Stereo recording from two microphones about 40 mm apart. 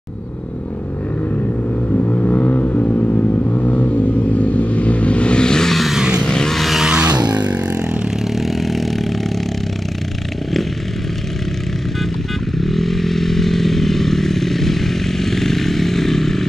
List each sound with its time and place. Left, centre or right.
1.9 s vehicle: left; by 5.7 s centre
5.7 s vehicle: centre
5.9 s vehicle: right
6.2 s vehicle: centre
6.5 s vehicle: centre
6.8 s music: centre
8.4 s vehicle: centre
12.5 s vehicle: centre